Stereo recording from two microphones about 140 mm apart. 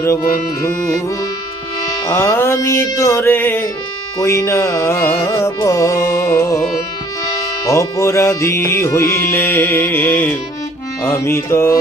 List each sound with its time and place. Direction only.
2.0 s music: 20° left (ahead or behind)
7.6 s music: 20° left (ahead or behind)